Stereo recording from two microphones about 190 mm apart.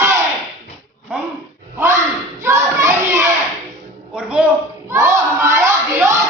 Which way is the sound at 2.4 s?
15° right (ahead or behind).